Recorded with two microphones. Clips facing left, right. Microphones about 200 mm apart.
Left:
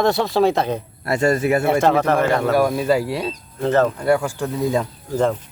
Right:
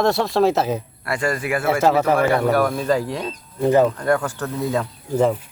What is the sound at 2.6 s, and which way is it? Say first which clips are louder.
Speech: left 2 dB; 10° left (ahead or behind).